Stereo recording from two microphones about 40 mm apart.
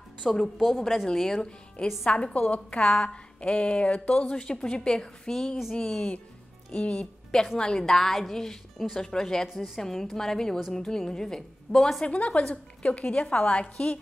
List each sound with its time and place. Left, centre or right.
0.2 s speech: centre
2.0 s a woman's voice: left
6.7 s a woman's voice: left
7.5 s speech: centre
12.0 s a woman's voice: left